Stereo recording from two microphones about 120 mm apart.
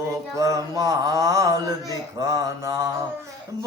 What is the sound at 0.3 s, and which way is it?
Mantra, 25° right (ahead or behind).